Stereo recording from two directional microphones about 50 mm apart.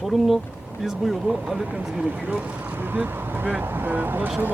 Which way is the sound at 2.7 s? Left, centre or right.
Right.